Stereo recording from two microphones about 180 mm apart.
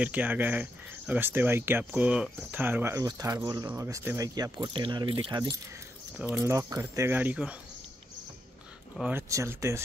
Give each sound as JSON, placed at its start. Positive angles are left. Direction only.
{"t": 0.0, "sound": "speech", "side_deg": -10}
{"t": 6.1, "sound": "speech", "side_deg": -10}
{"t": 9.1, "sound": "speech", "side_deg": -15}